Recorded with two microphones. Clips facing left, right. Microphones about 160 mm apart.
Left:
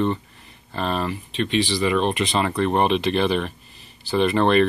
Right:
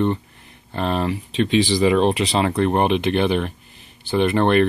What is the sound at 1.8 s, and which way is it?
Speech, 30° right (ahead or behind).